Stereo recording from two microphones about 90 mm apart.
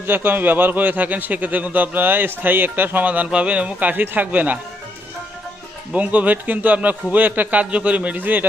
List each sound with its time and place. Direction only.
0.0 s a man's voice: 20° right (ahead or behind)
5.9 s a man's voice: 15° right (ahead or behind)